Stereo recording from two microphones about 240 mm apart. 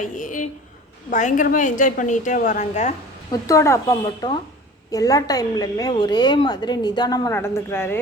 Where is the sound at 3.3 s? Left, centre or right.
Centre.